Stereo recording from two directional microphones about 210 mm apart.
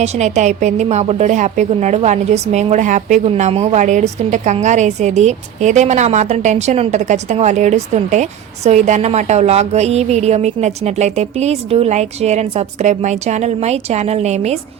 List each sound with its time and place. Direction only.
0.0 s a woman's voice: 30° right (ahead or behind)